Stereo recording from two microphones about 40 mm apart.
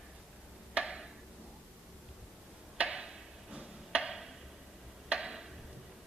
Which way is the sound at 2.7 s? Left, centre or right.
Right.